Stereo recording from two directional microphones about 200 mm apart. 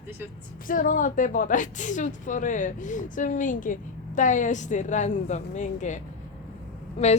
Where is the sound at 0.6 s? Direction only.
45° left (ahead or behind).